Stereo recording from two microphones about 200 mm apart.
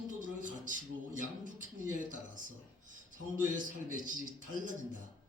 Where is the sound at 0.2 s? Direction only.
40° right (ahead or behind).